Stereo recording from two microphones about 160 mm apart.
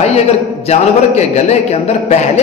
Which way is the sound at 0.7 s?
45° left (ahead or behind).